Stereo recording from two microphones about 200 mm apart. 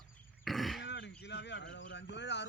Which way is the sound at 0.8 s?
60° left (ahead or behind).